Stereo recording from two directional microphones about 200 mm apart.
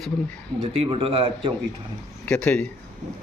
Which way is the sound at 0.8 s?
30° right (ahead or behind).